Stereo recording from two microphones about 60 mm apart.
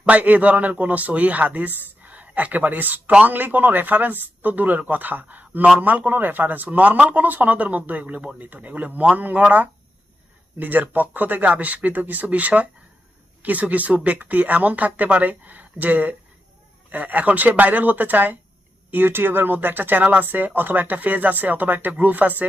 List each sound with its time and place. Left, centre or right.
0.0 s speech: right